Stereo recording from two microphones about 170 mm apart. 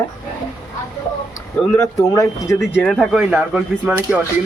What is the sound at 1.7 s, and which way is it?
Speech, 20° left (ahead or behind).